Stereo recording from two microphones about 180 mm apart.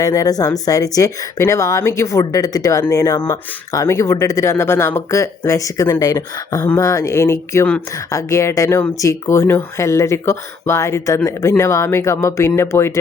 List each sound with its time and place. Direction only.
0.0 s speech: 20° left (ahead or behind)